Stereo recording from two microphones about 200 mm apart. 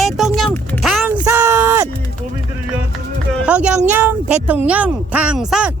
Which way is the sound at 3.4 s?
5° right (ahead or behind).